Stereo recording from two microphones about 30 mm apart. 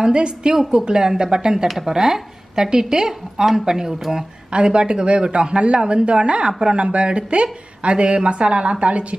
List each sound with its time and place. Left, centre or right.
0.0 s a woman's voice: right
4.5 s a woman's voice: right